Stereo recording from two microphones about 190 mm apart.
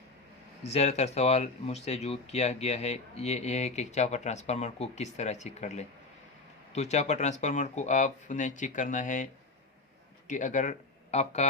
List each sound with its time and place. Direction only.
0.6 s speech: 35° left (ahead or behind)
10.2 s speech: 40° left (ahead or behind)